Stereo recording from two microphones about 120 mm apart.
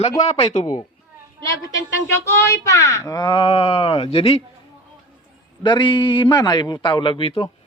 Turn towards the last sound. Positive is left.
turn(degrees=50)  # may be behind; listen again after turning